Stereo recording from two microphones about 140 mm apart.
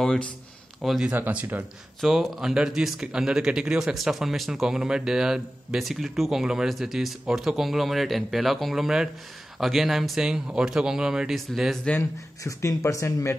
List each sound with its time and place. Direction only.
0.0 s speech: 5° left (ahead or behind); by 1.6 s 10° right (ahead or behind)
2.0 s speech: centre (ahead or behind)
12.0 s speech: 20° left (ahead or behind)